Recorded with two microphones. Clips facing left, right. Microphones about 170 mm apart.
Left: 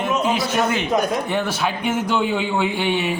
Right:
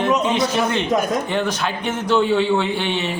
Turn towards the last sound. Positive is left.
turn(degrees=10)  # may be behind; listen again after turning